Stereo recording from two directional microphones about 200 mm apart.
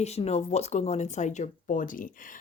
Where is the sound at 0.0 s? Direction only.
35° left (ahead or behind).